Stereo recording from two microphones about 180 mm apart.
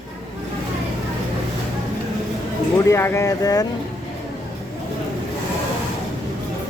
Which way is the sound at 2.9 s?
15° left (ahead or behind).